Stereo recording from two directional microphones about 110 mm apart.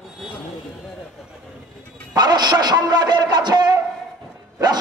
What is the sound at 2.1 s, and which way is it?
A man's voice, 40° right (ahead or behind).